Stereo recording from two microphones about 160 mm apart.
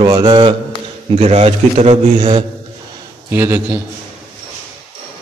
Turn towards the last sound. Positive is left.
turn(degrees=-15)  # may be behind; listen again after turning